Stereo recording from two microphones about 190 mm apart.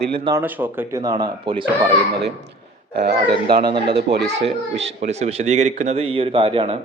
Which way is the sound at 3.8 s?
60° right (ahead or behind).